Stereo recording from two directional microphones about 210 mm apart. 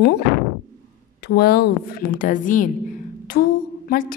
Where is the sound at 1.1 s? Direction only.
50° left (ahead or behind).